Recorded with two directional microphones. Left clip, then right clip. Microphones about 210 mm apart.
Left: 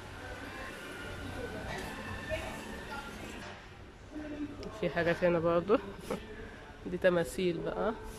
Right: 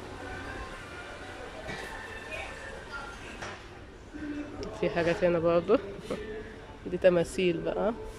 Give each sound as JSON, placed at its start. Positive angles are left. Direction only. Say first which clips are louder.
{"t": 4.6, "sound": "speech", "louder": "right 4 dB", "side_deg": 0}